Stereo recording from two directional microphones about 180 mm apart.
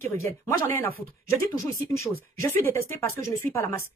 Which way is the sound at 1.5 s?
15° left (ahead or behind).